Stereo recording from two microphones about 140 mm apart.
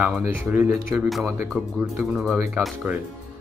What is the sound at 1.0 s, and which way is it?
Speech, centre (ahead or behind).